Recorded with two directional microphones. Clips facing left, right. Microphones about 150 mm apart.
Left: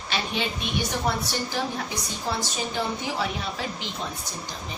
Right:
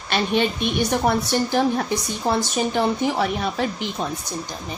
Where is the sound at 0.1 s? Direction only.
55° right (ahead or behind).